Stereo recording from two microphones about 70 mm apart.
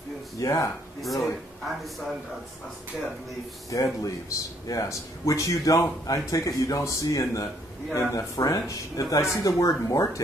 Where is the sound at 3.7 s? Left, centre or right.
Left.